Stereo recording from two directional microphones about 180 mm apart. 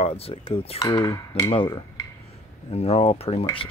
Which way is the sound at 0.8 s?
15° left (ahead or behind).